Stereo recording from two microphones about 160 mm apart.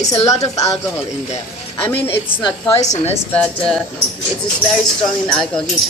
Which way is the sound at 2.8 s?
45° left (ahead or behind).